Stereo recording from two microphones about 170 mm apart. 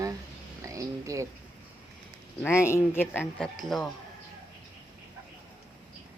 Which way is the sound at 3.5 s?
Centre (ahead or behind).